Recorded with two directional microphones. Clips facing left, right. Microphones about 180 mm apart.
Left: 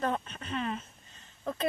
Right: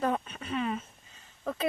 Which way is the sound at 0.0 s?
10° right (ahead or behind).